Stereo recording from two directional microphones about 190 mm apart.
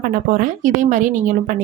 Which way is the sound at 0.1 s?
45° right (ahead or behind).